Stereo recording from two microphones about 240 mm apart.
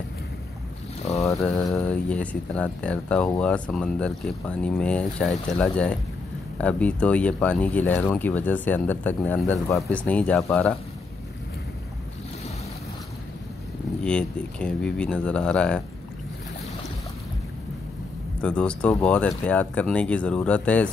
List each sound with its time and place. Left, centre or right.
1.5 s speech: centre
1.9 s speech: centre
14.0 s speech: centre
18.4 s speech: centre